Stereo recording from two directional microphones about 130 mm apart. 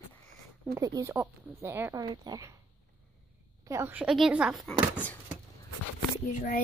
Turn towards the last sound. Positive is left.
turn(degrees=70)  # may be behind; listen again after turning